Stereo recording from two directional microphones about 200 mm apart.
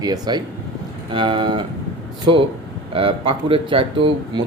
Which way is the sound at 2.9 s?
30° right (ahead or behind).